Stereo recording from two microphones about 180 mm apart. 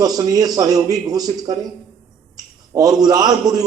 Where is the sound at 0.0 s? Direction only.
20° right (ahead or behind).